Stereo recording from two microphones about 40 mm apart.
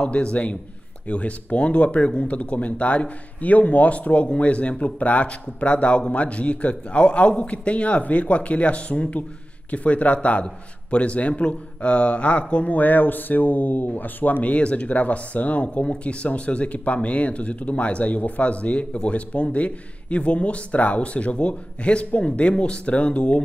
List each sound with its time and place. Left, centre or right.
0.0 s a man's voice: left
12.7 s speech: left
14.4 s speech: left